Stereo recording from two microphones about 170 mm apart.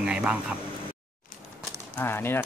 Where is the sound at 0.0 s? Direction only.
5° right (ahead or behind).